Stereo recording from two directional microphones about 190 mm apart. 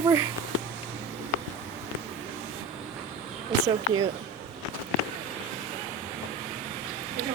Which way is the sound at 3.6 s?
25° right (ahead or behind).